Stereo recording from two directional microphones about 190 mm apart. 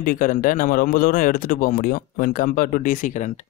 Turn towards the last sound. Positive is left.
turn(degrees=40)  # may be behind; listen again after turning